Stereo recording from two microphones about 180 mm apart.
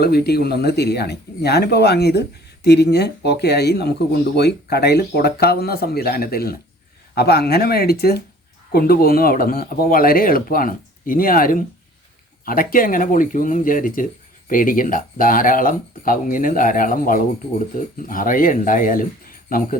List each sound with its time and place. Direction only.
0.0 s speech: 60° left (ahead or behind)